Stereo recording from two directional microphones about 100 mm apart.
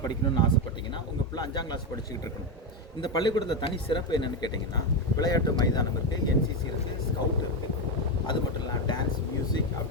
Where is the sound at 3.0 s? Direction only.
45° left (ahead or behind).